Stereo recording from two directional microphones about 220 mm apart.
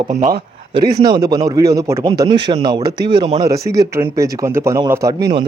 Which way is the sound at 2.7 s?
45° right (ahead or behind).